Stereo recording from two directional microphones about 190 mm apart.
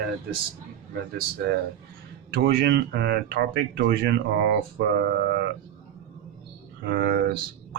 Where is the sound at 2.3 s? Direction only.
50° right (ahead or behind).